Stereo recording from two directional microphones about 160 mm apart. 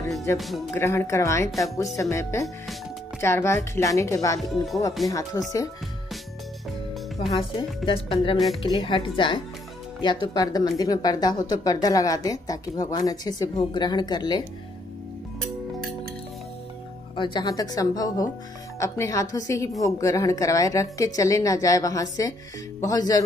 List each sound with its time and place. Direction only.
0.3 s a woman's voice: 15° left (ahead or behind)
4.4 s speech: centre (ahead or behind)
5.0 s a woman's voice: 20° left (ahead or behind)
7.2 s a woman's voice: 35° left (ahead or behind)
17.1 s a woman's voice: 30° left (ahead or behind)